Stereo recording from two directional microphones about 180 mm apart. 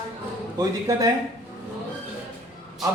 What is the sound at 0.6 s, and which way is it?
Speech, 20° right (ahead or behind).